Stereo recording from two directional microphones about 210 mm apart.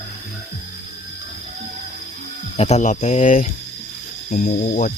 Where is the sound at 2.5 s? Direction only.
30° left (ahead or behind).